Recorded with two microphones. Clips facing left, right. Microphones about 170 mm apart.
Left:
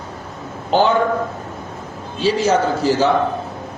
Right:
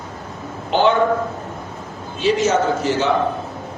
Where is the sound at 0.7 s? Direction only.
40° left (ahead or behind).